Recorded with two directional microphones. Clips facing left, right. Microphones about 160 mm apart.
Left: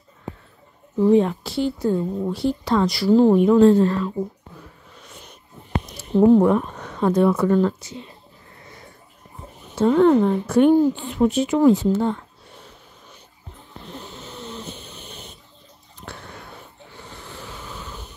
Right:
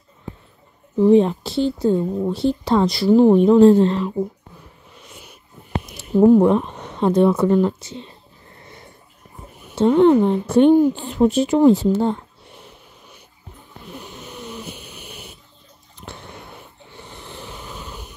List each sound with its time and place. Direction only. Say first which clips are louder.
0.9 s speech: right 3 dB; 20° right (ahead or behind)
3.3 s speech: right 3 dB; 30° right (ahead or behind)
5.1 s a sound: even; 5° right (ahead or behind)
6.0 s speech: right 2 dB; 5° right (ahead or behind)
6.4 s speech: right 2 dB; 20° right (ahead or behind)
9.8 s speech: right 2 dB; 25° right (ahead or behind)
11.0 s speech: right 3 dB; 35° right (ahead or behind)
13.8 s snoring: right 1 dB; 15° right (ahead or behind)
16.1 s wheeze: right 1 dB; 20° right (ahead or behind)